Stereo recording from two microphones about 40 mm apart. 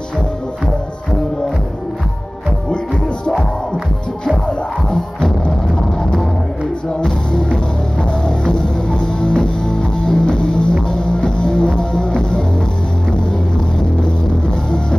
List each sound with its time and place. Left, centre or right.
7.0 s music: centre